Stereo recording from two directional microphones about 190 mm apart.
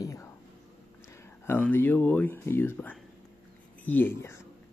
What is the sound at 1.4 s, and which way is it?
Speech, 10° left (ahead or behind).